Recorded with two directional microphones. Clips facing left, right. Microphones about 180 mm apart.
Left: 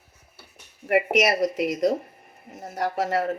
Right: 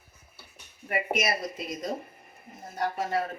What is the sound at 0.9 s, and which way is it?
A woman's voice, 80° left.